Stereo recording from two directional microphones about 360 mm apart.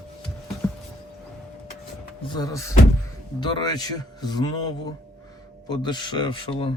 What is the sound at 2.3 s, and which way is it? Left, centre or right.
Speech, centre.